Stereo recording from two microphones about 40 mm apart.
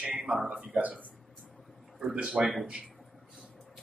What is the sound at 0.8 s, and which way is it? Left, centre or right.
Speech, right.